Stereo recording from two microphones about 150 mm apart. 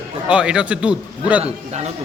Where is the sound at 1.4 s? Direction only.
45° right (ahead or behind).